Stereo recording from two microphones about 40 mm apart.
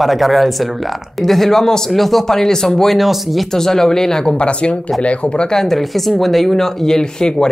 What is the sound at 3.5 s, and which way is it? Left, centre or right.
Speech, centre.